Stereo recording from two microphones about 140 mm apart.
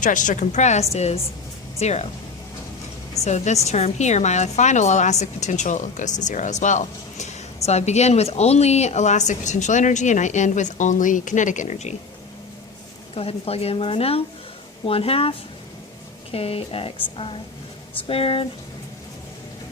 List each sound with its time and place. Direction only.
0.0 s a woman's voice: 65° left (ahead or behind); by 2.0 s 50° left (ahead or behind)
3.2 s a woman's voice: 55° left (ahead or behind)
13.1 s speech: 45° left (ahead or behind)